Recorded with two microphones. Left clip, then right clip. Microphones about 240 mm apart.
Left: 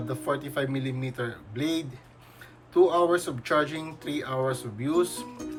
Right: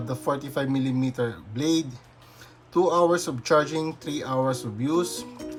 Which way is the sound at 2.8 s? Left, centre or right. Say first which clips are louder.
Right 5 dB; centre.